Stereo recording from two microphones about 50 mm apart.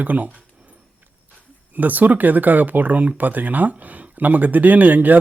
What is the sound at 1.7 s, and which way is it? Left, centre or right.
Speech, right.